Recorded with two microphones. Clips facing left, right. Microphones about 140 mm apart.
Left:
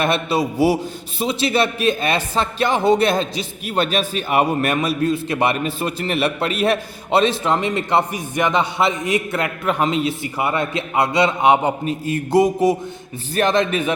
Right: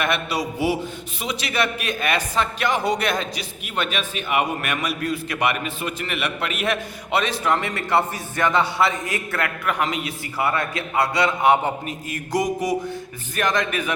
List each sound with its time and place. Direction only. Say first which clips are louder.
0.0 s a man's voice: left 5 dB; 30° left (ahead or behind)